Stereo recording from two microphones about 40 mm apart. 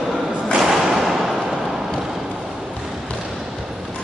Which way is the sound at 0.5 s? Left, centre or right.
Centre.